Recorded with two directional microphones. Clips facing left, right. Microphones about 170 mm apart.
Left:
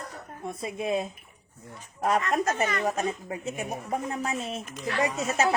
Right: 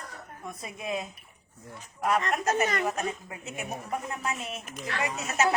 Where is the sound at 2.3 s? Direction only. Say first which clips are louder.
Left 1 dB; 35° left (ahead or behind).